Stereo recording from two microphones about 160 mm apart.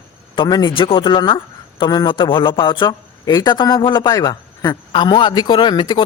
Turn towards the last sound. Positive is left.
turn(degrees=30)  # may be behind; listen again after turning